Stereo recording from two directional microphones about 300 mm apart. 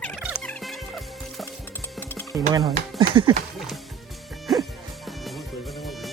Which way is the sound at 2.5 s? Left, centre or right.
Centre.